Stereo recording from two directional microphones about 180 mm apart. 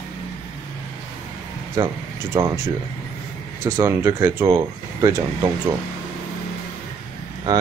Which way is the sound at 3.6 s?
15° right (ahead or behind).